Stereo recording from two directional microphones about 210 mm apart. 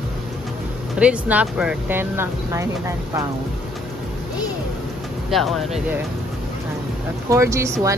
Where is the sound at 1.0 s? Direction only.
5° right (ahead or behind).